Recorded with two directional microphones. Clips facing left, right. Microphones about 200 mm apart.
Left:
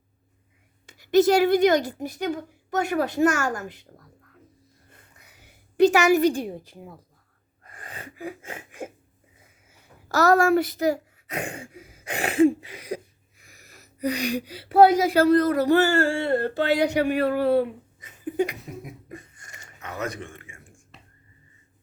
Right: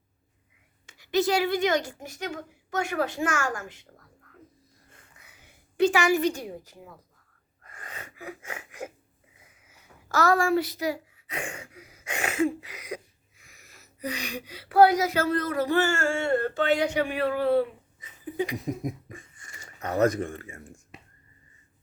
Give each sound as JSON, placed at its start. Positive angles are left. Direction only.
{"t": 0.9, "sound": "speech", "side_deg": 45}
{"t": 5.8, "sound": "speech", "side_deg": 40}
{"t": 7.6, "sound": "gasp", "side_deg": 30}
{"t": 10.1, "sound": "a child's voice", "side_deg": 40}
{"t": 18.6, "sound": "a sound", "side_deg": -40}
{"t": 19.1, "sound": "a sound", "side_deg": 40}
{"t": 19.8, "sound": "speech", "side_deg": -40}